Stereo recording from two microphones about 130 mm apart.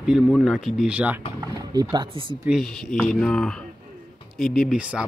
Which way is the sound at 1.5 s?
30° right (ahead or behind).